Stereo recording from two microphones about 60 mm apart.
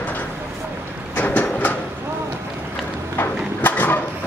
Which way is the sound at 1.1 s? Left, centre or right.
Left.